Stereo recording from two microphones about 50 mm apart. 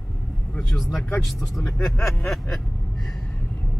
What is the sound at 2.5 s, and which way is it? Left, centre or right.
Gasp, centre.